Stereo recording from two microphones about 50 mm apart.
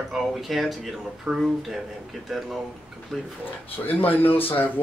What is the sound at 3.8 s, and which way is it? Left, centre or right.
Speech, left.